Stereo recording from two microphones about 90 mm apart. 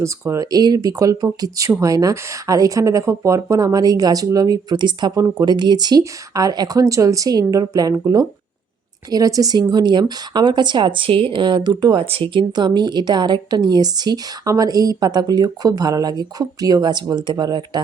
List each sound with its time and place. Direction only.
0.0 s speech: 35° right (ahead or behind); by 17.8 s 55° right (ahead or behind)